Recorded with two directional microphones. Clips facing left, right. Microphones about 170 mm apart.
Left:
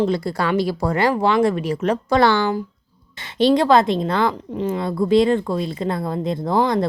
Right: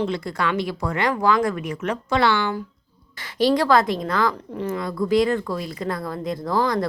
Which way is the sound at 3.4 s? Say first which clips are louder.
Left 3 dB; 20° left (ahead or behind).